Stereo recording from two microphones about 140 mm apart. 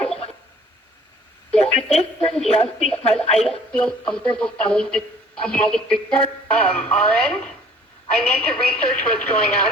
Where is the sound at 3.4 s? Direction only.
5° left (ahead or behind).